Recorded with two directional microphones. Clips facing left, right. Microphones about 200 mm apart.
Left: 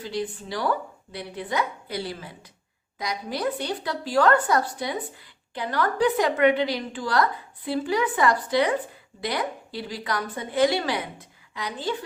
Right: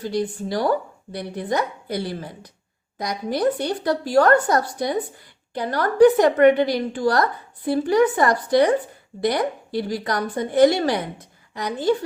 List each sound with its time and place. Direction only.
0.0 s a woman's voice: 40° right (ahead or behind)